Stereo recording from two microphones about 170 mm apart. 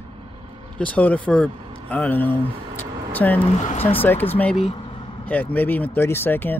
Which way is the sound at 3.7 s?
35° left (ahead or behind).